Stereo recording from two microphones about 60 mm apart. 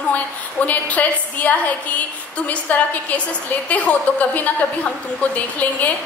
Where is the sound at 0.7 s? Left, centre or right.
Left.